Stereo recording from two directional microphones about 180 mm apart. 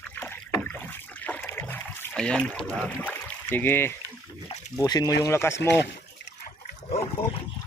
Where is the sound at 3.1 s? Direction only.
10° left (ahead or behind).